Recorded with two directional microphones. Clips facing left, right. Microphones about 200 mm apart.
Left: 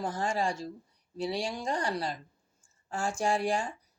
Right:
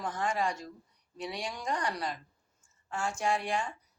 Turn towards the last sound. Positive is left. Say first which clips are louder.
# left 2 dB
turn(degrees=30)  # may be behind; listen again after turning